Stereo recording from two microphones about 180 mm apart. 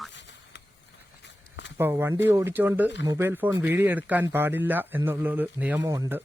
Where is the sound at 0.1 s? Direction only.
80° left.